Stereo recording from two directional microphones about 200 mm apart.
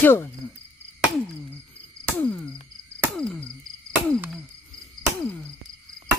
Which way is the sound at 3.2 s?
5° left (ahead or behind).